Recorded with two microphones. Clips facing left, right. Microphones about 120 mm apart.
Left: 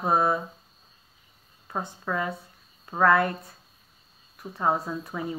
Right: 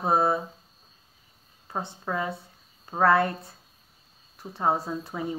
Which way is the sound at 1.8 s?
25° right (ahead or behind).